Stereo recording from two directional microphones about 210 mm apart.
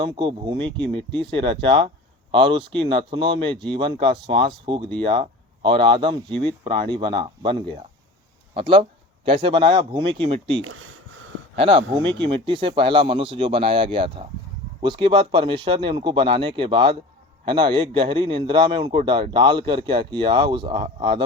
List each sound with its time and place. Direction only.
0.0 s a man's voice: 25° right (ahead or behind)
10.6 s speech: 75° right (ahead or behind)
11.5 s a man's voice: 25° right (ahead or behind)